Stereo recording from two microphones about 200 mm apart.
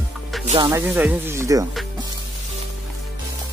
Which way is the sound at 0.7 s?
10° right (ahead or behind).